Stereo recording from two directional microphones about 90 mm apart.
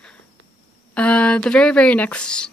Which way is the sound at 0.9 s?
15° left (ahead or behind).